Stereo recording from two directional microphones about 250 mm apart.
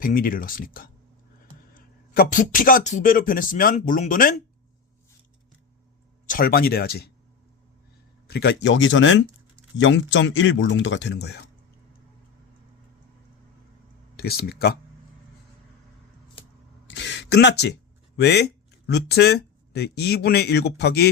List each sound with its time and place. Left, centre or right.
0.0 s speech: left
6.2 s speech: left
8.3 s speech: left
14.2 s speech: left
16.8 s a sound: left
18.2 s speech: left